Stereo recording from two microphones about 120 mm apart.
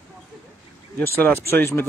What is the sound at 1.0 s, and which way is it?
Speech, 15° left (ahead or behind).